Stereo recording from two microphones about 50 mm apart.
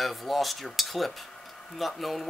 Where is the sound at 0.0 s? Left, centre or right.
Centre.